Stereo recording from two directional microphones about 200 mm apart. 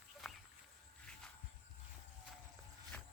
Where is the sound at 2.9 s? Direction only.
5° left (ahead or behind).